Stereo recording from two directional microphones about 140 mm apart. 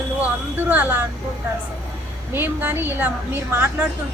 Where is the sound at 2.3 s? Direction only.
15° right (ahead or behind).